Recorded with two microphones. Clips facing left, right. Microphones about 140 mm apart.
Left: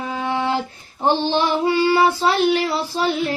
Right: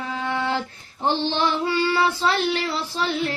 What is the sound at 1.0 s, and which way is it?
Female singing, 15° left (ahead or behind).